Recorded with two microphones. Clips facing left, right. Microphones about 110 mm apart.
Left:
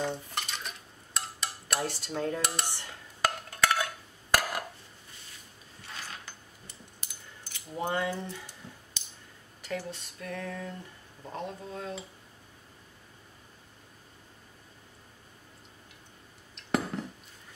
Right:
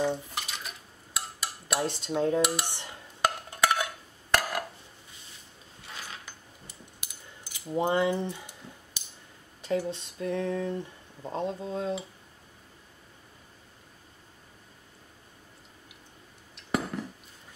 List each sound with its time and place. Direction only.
0.0 s dishes: 5° right (ahead or behind)
1.9 s speech: 20° right (ahead or behind)
2.6 s dishes: 20° right (ahead or behind)
4.3 s a sound: centre (ahead or behind)
6.0 s a sound: 15° right (ahead or behind)
7.7 s speech: 20° right (ahead or behind)
9.6 s speech: 20° right (ahead or behind)
16.5 s dishes: centre (ahead or behind)